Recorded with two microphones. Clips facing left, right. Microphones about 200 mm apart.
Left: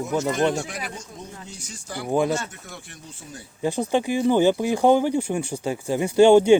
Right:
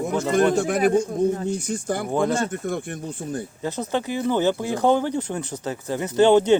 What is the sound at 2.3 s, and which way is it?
Speech, 55° right (ahead or behind).